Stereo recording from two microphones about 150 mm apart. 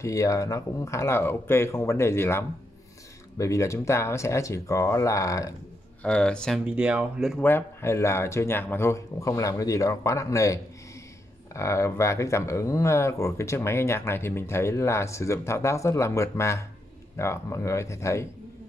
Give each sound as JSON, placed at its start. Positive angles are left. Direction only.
{"t": 0.0, "sound": "speech", "side_deg": 20}
{"t": 6.0, "sound": "speech", "side_deg": 5}
{"t": 6.6, "sound": "speech", "side_deg": -10}
{"t": 7.4, "sound": "speech", "side_deg": 15}